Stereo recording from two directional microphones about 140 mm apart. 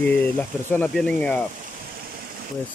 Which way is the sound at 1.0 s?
5° left (ahead or behind).